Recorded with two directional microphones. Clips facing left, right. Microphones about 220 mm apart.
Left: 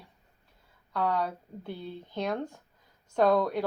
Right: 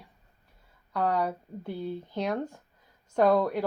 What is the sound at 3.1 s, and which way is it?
Speech, 10° right (ahead or behind).